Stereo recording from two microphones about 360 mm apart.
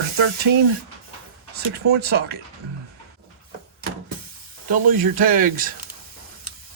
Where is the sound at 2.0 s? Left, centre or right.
Right.